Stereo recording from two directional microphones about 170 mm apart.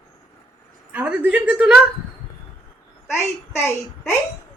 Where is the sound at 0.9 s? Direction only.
10° right (ahead or behind).